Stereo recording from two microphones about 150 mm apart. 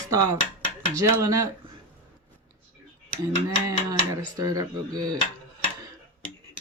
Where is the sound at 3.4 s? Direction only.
20° right (ahead or behind).